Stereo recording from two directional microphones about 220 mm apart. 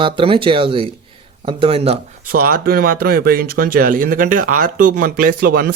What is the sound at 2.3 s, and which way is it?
Speech, 40° right (ahead or behind).